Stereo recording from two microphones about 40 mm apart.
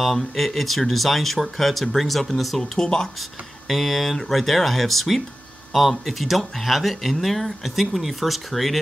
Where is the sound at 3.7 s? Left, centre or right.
Centre.